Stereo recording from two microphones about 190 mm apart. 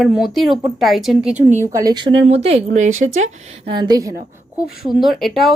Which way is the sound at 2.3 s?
30° right (ahead or behind).